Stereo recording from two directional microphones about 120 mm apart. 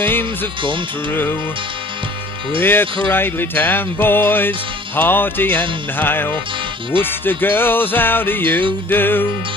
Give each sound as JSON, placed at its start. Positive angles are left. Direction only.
{"t": 0.0, "sound": "music", "side_deg": 20}
{"t": 0.6, "sound": "speech", "side_deg": -45}
{"t": 2.6, "sound": "music", "side_deg": 15}